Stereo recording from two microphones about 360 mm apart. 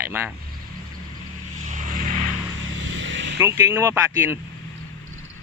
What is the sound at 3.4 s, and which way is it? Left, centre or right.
Speech, centre.